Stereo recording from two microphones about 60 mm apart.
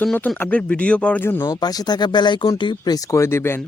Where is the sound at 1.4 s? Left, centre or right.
Left.